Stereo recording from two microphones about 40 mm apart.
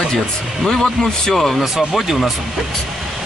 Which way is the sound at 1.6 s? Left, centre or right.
Centre.